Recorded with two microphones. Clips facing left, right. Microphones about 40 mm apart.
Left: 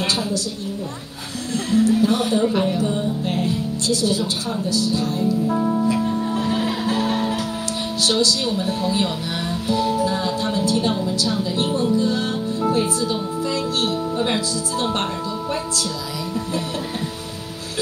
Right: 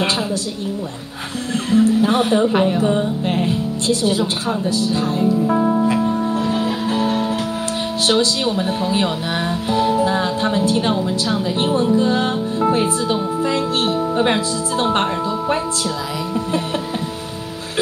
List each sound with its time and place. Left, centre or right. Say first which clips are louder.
0.0 s speech: right 3 dB; right
1.7 s speech: right 2 dB; right
8.0 s speech: right 2 dB; right
9.7 s music: right 3 dB; right
11.1 s speech: right 2 dB; right